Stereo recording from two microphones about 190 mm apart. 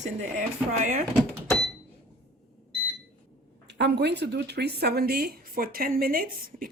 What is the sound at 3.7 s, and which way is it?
Speech, 60° right (ahead or behind).